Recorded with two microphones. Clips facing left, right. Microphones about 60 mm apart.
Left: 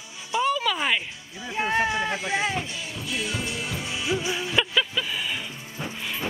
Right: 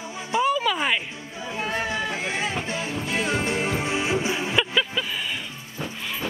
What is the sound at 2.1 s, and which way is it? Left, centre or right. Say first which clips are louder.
Music: left 1 dB; right.